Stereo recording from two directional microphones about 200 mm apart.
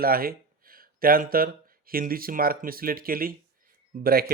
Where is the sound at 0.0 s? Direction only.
45° right (ahead or behind).